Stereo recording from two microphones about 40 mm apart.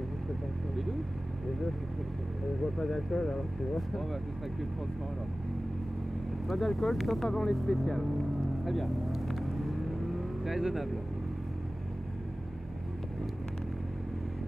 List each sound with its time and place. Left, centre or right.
2.8 s speech: centre
6.4 s speech: centre
8.6 s vehicle: centre
10.4 s speech: centre